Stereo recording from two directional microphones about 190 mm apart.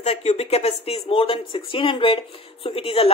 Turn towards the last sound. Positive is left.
turn(degrees=30)  # may be behind; listen again after turning